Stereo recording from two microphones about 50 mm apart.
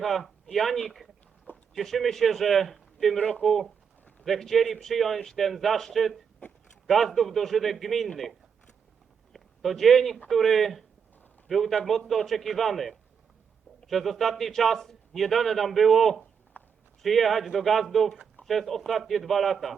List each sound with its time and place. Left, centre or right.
0.0 s a man's voice: centre
3.2 s speech: left
3.4 s a man's voice: centre
16.6 s a sound: left
17.0 s a man's voice: centre